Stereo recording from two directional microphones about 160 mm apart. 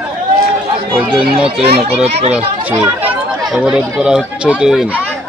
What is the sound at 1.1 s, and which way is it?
Speech, 5° right (ahead or behind).